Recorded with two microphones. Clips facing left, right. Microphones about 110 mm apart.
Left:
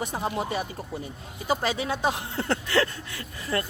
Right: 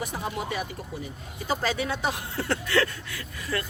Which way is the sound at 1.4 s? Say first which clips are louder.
Left 1 dB; 15° left (ahead or behind).